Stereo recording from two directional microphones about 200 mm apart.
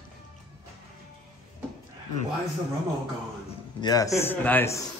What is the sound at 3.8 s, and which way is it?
Speech, 15° left (ahead or behind).